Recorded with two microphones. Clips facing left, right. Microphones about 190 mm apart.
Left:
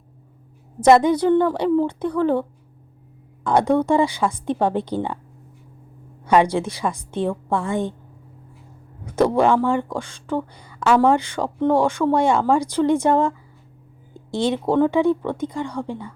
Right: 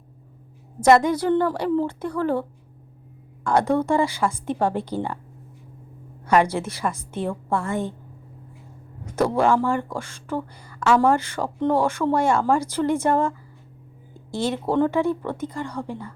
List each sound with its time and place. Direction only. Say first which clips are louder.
0.9 s a woman's voice: left 3 dB; 20° left (ahead or behind)
3.4 s speech: left 3 dB; 20° left (ahead or behind)
6.2 s speech: left 3 dB; 15° left (ahead or behind)
9.3 s speech: even; 15° left (ahead or behind)
14.3 s speech: left 3 dB; 15° left (ahead or behind)